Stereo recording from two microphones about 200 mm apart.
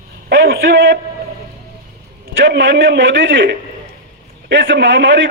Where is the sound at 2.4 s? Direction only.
70° right (ahead or behind).